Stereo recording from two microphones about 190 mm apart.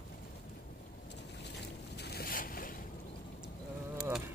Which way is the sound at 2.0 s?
55° left (ahead or behind).